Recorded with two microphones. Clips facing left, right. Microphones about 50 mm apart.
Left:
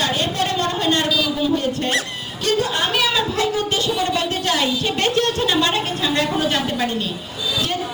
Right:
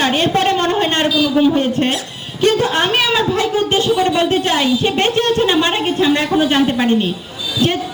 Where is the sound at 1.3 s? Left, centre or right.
Right.